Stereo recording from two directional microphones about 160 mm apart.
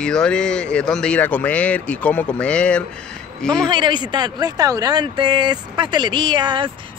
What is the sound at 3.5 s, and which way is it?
Speech, 30° right (ahead or behind).